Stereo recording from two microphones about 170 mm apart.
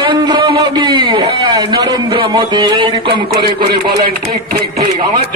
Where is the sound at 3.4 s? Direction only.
65° right (ahead or behind).